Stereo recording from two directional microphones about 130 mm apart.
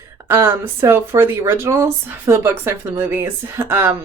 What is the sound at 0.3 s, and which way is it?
Speech, 20° right (ahead or behind).